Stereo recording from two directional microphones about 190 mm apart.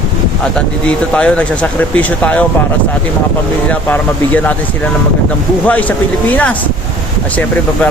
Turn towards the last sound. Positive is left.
turn(degrees=10)  # may be behind; listen again after turning